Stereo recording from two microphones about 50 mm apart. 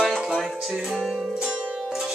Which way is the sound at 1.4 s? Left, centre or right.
Centre.